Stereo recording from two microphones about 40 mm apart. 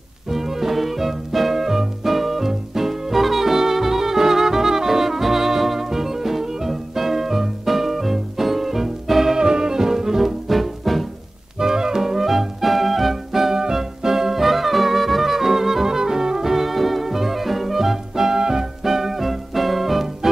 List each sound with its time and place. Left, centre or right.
0.3 s music: centre
11.6 s music: centre